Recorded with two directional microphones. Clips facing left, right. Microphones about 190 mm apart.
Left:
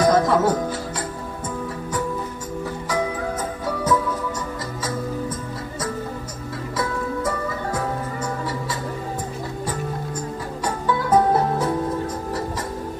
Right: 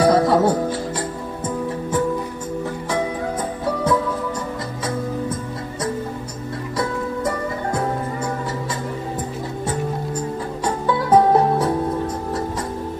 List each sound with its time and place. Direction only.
0.0 s music: 30° right (ahead or behind)
10.9 s music: 30° right (ahead or behind)